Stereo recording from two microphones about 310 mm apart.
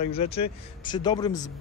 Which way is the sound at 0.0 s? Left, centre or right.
Centre.